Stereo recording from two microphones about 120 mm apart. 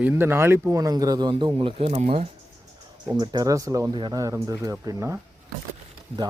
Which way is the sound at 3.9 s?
40° right (ahead or behind).